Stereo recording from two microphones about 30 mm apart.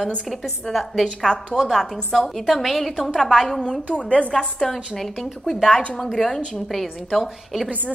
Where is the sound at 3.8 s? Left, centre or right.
Left.